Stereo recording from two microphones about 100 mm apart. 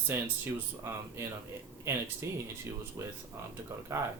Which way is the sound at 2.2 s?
30° right (ahead or behind).